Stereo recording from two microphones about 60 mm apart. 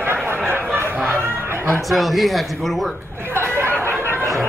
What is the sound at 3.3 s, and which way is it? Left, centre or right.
Chatter, right.